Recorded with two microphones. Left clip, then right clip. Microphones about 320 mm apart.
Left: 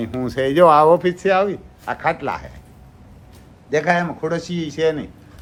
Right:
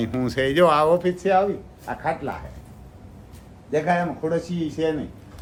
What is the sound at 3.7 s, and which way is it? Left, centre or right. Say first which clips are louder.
Speech: left 4 dB; left.